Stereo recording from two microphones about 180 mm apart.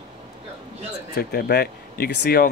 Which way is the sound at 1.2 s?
60° left (ahead or behind).